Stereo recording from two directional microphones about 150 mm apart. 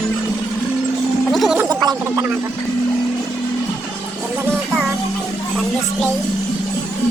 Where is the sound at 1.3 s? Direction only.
Centre (ahead or behind).